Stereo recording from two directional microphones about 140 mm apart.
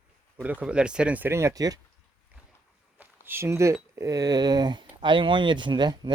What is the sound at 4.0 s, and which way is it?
Speech, 25° right (ahead or behind).